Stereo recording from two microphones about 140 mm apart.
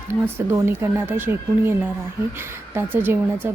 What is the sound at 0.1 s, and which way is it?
A woman's voice, 20° right (ahead or behind).